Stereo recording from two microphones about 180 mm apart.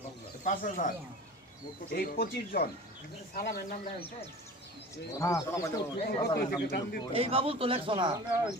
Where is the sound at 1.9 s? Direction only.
55° left (ahead or behind).